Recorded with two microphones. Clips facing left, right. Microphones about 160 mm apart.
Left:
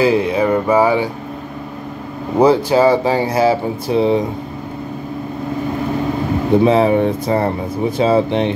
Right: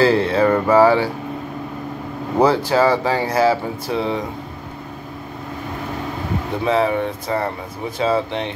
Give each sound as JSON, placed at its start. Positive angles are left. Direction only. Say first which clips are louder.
{"t": 0.0, "sound": "speech", "louder": "left 1 dB", "side_deg": 15}
{"t": 2.3, "sound": "speech", "louder": "left 4 dB", "side_deg": 15}
{"t": 6.6, "sound": "speech", "louder": "left 3 dB", "side_deg": 20}